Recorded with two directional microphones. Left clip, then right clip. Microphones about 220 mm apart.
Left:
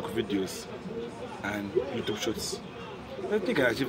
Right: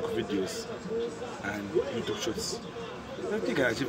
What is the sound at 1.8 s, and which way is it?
Speech, 45° right (ahead or behind).